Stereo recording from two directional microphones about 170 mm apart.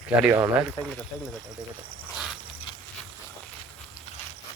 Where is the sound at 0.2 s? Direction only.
10° right (ahead or behind).